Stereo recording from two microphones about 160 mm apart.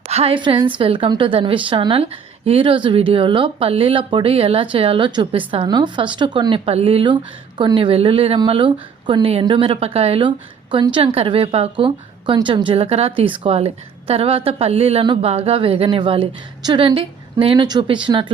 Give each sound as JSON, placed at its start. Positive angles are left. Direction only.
{"t": 0.1, "sound": "a woman's voice", "side_deg": -35}